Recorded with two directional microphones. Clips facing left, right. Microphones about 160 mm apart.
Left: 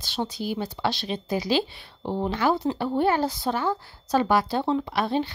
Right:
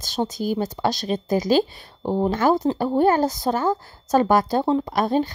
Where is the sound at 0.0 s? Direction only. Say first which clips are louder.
Right 5 dB; 45° right (ahead or behind).